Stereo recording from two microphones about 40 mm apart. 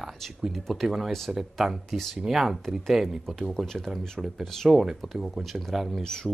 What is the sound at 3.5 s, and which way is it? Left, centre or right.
Speech, centre.